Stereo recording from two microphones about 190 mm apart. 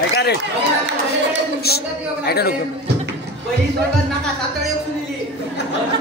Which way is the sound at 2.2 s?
55° left (ahead or behind).